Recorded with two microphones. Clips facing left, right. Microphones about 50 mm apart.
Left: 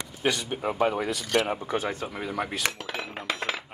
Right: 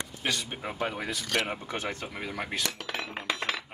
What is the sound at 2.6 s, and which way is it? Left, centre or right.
Cutlery, left.